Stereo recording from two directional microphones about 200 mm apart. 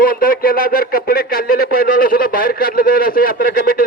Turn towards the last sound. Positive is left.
turn(degrees=45)  # may be behind; listen again after turning